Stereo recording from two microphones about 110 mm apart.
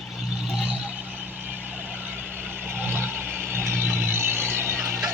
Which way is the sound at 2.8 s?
20° right (ahead or behind).